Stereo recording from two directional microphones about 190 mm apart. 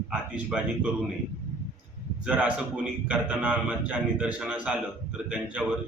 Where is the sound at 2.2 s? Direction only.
5° right (ahead or behind).